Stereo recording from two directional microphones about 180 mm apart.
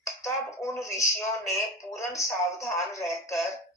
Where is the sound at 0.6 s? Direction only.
15° left (ahead or behind).